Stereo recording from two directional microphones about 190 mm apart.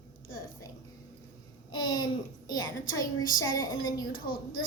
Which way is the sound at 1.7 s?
90° left.